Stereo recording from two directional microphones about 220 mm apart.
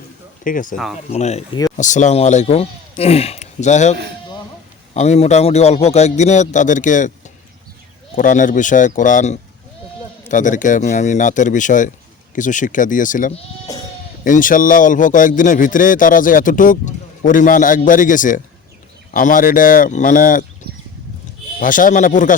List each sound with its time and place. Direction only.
0.4 s a man's voice: 35° left (ahead or behind)
4.9 s a man's voice: 30° left (ahead or behind)
8.1 s a man's voice: 35° left (ahead or behind)
21.6 s a man's voice: 35° left (ahead or behind)